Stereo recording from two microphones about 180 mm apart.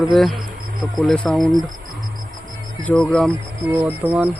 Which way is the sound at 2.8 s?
5° left (ahead or behind).